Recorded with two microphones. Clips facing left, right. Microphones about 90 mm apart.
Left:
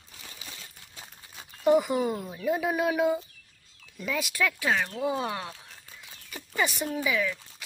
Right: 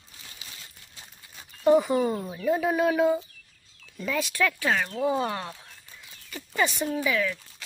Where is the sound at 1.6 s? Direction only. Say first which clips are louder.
Right 2 dB; 10° left (ahead or behind).